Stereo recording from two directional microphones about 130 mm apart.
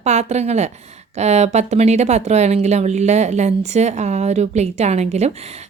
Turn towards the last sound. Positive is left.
turn(degrees=-60)  # may be behind; listen again after turning